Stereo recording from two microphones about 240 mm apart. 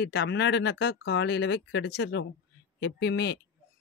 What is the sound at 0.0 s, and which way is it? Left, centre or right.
Speech, left.